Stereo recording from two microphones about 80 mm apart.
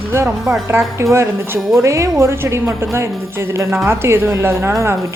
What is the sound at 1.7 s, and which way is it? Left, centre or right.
A woman's voice, right.